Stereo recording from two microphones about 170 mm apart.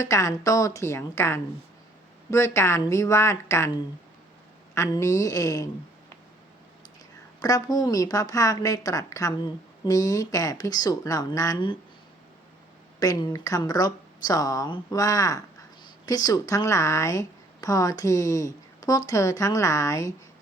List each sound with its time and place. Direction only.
0.0 s a woman's voice: 20° left (ahead or behind)
7.3 s a woman's voice: 20° left (ahead or behind)
13.0 s a woman's voice: 20° left (ahead or behind)